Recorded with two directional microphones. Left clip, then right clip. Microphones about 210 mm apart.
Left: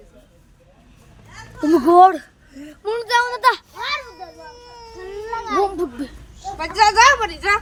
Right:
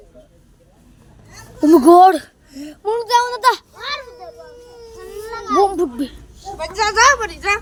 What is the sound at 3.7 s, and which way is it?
Children playing, 35° left (ahead or behind).